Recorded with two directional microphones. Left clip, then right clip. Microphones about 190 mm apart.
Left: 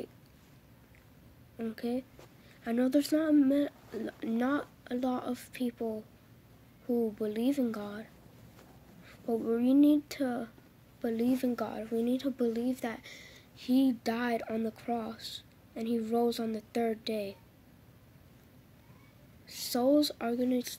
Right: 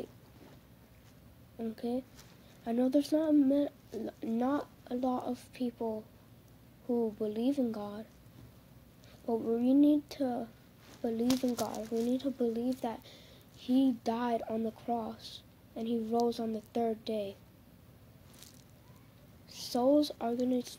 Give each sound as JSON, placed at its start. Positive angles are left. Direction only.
{"t": 1.6, "sound": "speech", "side_deg": 15}
{"t": 9.2, "sound": "speech", "side_deg": 20}
{"t": 19.4, "sound": "speech", "side_deg": 15}